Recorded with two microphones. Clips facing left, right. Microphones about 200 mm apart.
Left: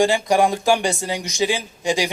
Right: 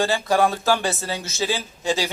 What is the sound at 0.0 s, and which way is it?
Speech, 15° left (ahead or behind).